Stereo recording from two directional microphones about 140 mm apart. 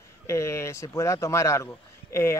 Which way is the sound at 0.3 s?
20° left (ahead or behind).